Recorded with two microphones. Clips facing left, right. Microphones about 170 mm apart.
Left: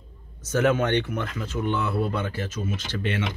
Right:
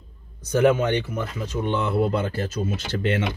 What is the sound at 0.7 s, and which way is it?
Speech, 60° left (ahead or behind).